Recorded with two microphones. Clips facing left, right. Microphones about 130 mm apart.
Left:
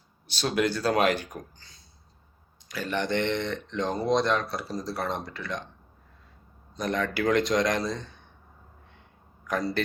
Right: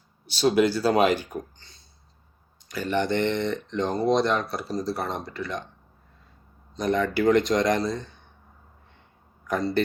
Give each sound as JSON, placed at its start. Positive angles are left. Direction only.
{"t": 0.3, "sound": "speech", "side_deg": -5}
{"t": 6.7, "sound": "speech", "side_deg": 0}